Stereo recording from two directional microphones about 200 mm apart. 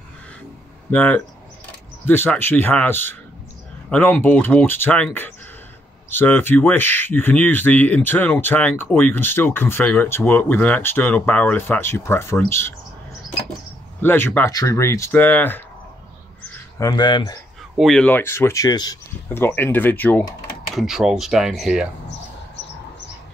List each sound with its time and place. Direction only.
0.9 s speech: 5° left (ahead or behind)
14.0 s speech: 10° left (ahead or behind)
16.4 s a sound: 15° left (ahead or behind)
17.7 s speech: centre (ahead or behind)
20.7 s speech: centre (ahead or behind)